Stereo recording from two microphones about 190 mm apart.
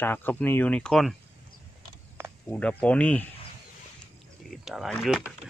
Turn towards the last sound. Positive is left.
turn(degrees=-5)  # may be behind; listen again after turning